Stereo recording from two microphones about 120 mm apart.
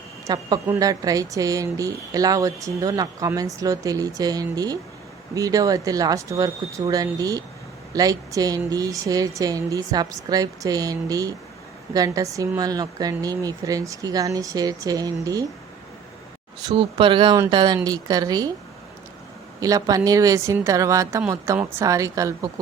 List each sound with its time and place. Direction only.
0.3 s speech: 35° right (ahead or behind)
16.7 s speech: 50° right (ahead or behind); by 18.5 s 30° right (ahead or behind)
19.5 s speech: 30° right (ahead or behind)